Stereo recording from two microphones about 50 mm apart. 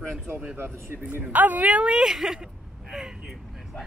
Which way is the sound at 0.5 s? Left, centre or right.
Right.